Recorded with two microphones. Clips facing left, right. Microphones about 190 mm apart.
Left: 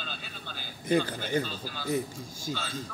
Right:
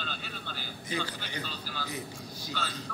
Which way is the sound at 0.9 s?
50° left (ahead or behind).